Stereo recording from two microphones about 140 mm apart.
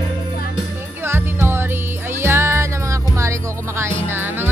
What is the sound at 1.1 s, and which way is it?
Music, 15° right (ahead or behind).